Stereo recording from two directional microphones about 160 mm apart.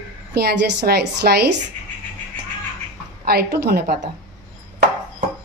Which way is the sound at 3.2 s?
85° right.